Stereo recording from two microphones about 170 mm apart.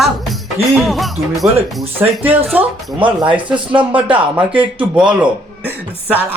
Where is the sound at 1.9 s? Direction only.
10° right (ahead or behind).